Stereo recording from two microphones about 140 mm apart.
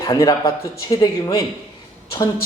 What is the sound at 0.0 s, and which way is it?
Speech, 25° left (ahead or behind).